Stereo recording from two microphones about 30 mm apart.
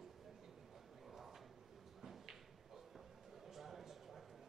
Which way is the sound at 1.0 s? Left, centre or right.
Centre.